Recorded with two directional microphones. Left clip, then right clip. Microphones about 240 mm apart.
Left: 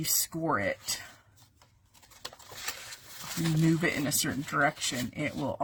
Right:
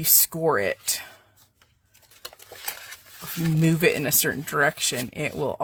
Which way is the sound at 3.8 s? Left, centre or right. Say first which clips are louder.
Right 8 dB; right.